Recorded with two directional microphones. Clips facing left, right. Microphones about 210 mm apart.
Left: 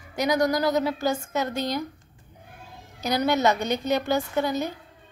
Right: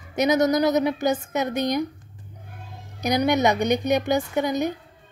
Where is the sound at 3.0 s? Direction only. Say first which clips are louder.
Right 2 dB; 15° right (ahead or behind).